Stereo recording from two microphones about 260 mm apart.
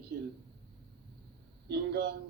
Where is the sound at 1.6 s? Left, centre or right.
Right.